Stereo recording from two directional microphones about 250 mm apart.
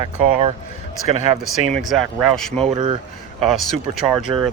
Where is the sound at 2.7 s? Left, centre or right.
Right.